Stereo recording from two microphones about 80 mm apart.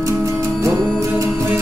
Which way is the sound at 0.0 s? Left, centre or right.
Right.